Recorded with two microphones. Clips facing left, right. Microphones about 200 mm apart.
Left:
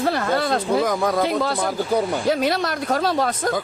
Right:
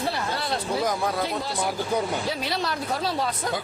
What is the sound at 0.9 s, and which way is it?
Speech, 90° left.